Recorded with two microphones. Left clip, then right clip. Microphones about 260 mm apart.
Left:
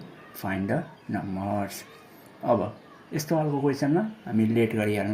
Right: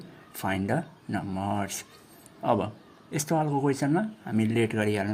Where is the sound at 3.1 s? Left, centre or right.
Right.